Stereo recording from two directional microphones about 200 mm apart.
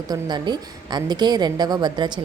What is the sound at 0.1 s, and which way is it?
A woman's voice, 20° right (ahead or behind).